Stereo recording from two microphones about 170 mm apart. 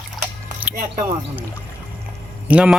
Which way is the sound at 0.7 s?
55° right (ahead or behind).